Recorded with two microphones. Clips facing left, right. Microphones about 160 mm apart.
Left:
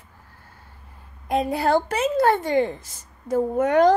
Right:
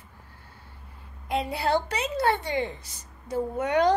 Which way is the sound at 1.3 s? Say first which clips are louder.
Left 5 dB; 45° left (ahead or behind).